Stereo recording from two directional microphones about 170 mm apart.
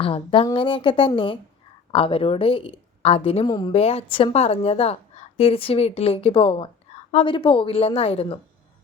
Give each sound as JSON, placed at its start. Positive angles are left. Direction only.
{"t": 0.0, "sound": "a woman's voice", "side_deg": 30}
{"t": 3.4, "sound": "speech", "side_deg": 25}
{"t": 3.7, "sound": "a woman's voice", "side_deg": 35}